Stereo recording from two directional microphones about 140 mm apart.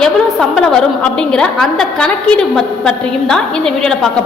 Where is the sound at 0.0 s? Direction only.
5° left (ahead or behind).